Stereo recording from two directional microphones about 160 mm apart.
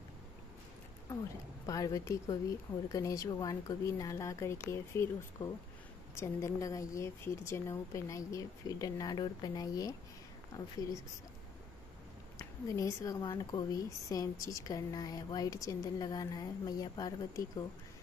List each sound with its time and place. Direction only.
1.7 s speech: 20° left (ahead or behind)
12.4 s speech: 20° left (ahead or behind)